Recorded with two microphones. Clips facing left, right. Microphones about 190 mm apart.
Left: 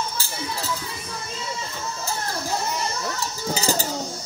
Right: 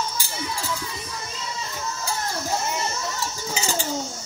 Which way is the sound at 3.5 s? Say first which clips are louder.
Left 4 dB; 40° left (ahead or behind).